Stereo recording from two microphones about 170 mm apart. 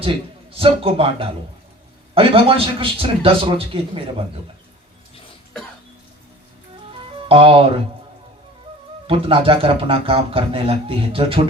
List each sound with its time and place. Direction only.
0.5 s a man's voice: 30° right (ahead or behind)
7.3 s speech: 30° right (ahead or behind)
9.0 s a man's voice: 30° right (ahead or behind)